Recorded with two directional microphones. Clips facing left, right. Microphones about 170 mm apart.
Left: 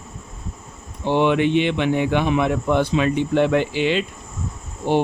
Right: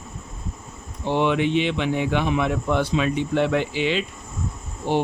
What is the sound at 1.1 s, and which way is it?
Speech, 60° left (ahead or behind).